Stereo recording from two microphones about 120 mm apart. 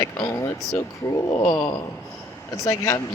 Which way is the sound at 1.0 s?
25° left (ahead or behind).